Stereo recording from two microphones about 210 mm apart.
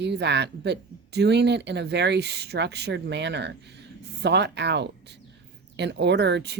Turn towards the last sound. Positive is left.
turn(degrees=-55)  # may be behind; listen again after turning